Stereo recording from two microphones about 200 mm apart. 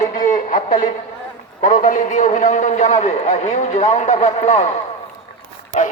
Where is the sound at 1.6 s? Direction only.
40° left (ahead or behind).